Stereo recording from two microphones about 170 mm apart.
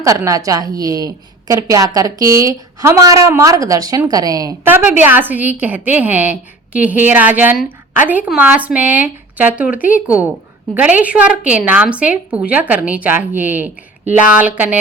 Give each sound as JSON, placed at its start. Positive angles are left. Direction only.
{"t": 0.0, "sound": "a woman's voice", "side_deg": -20}